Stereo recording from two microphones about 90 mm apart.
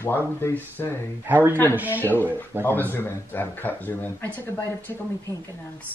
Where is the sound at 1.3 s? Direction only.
25° right (ahead or behind).